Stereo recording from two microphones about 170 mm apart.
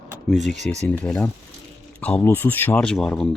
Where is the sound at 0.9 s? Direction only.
10° left (ahead or behind).